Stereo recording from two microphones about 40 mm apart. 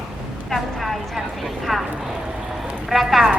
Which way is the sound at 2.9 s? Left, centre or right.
Centre.